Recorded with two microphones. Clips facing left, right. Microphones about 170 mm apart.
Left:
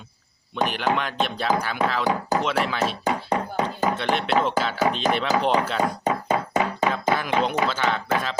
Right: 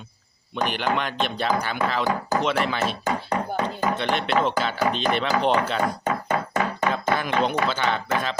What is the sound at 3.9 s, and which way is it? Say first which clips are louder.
Speech: even; 5° left (ahead or behind).